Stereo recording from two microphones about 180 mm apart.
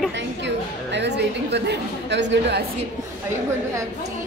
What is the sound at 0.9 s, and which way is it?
A woman's voice, 70° right (ahead or behind).